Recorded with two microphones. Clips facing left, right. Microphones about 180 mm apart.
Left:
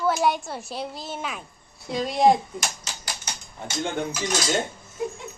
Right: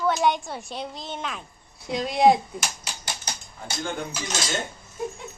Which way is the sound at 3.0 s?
35° right (ahead or behind).